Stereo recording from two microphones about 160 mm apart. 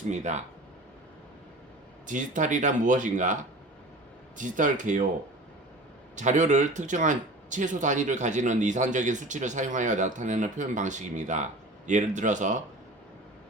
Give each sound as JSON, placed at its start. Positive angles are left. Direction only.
{"t": 0.1, "sound": "speech", "side_deg": -45}
{"t": 2.0, "sound": "speech", "side_deg": -55}
{"t": 4.4, "sound": "speech", "side_deg": -55}
{"t": 6.1, "sound": "speech", "side_deg": -50}